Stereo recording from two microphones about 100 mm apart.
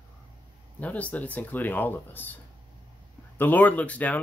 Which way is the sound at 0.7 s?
15° left (ahead or behind).